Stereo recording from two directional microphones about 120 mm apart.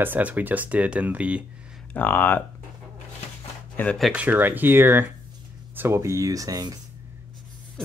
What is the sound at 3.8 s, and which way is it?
Speech, 15° left (ahead or behind).